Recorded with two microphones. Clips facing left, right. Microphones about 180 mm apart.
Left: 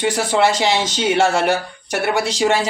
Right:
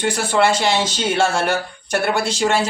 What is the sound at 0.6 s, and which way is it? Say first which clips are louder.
Speech: left 1 dB; 15° left (ahead or behind).